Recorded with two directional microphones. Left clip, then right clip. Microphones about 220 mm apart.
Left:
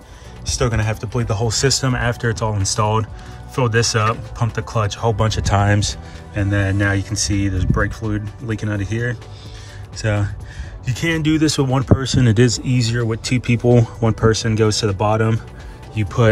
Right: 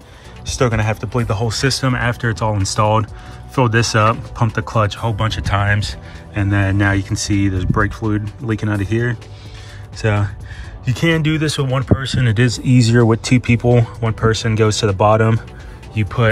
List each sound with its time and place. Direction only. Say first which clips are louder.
0.5 s speech: right 3 dB; 10° left (ahead or behind)
5.1 s speech: left 1 dB; 25° left (ahead or behind)
6.3 s speech: right 2 dB; 10° left (ahead or behind)